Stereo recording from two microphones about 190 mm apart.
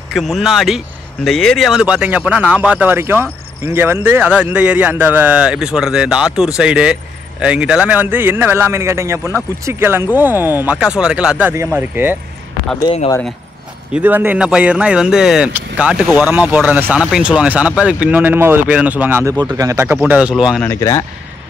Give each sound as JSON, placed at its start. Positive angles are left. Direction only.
{"t": 0.1, "sound": "speech", "side_deg": 0}
{"t": 12.8, "sound": "speech", "side_deg": 30}
{"t": 13.9, "sound": "speech", "side_deg": -10}
{"t": 20.6, "sound": "speech", "side_deg": 15}